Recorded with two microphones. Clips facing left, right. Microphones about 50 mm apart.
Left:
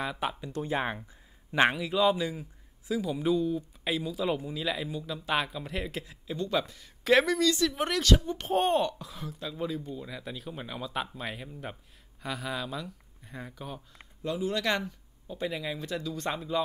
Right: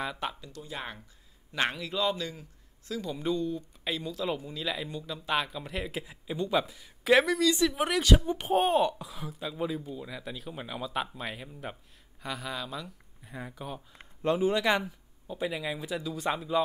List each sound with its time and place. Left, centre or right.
0.0 s speech: centre
0.6 s a man's voice: left
1.8 s a man's voice: centre
6.0 s speech: centre
14.2 s speech: right
14.5 s speech: centre